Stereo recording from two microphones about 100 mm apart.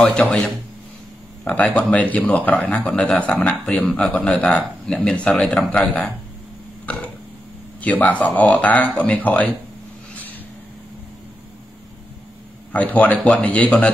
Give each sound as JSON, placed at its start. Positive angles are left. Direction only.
{"t": 0.0, "sound": "speech", "side_deg": 10}
{"t": 7.8, "sound": "speech", "side_deg": 15}
{"t": 12.7, "sound": "speech", "side_deg": 15}